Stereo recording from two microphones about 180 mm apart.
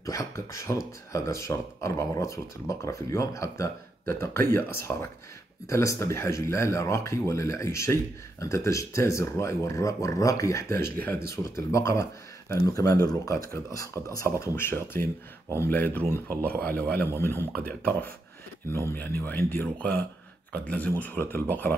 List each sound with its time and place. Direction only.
0.0 s speech: 20° left (ahead or behind)